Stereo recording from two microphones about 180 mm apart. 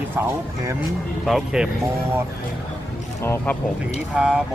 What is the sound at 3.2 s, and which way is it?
Speech, 15° left (ahead or behind).